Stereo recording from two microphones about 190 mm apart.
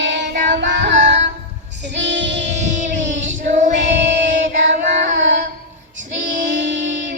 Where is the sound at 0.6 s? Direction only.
70° right (ahead or behind).